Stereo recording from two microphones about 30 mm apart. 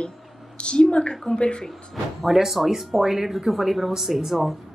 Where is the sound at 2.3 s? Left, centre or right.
Centre.